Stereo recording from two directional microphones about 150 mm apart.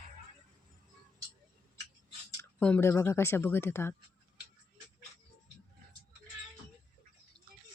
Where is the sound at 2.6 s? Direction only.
15° left (ahead or behind).